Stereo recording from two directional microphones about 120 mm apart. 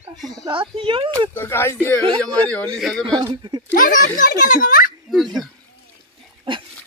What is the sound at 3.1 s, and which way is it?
Speech, 35° right (ahead or behind).